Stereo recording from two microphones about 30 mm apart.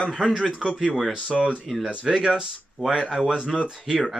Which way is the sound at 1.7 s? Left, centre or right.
Centre.